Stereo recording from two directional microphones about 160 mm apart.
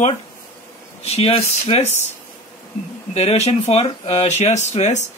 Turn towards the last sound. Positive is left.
turn(degrees=45)  # may be behind; listen again after turning